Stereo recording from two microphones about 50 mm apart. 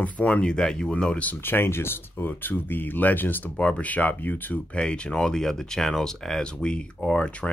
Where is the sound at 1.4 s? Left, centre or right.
Left.